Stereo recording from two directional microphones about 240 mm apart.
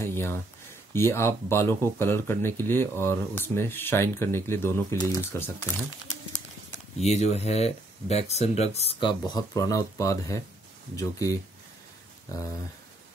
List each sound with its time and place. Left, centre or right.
0.0 s a sound: centre
0.9 s speech: centre
7.0 s speech: left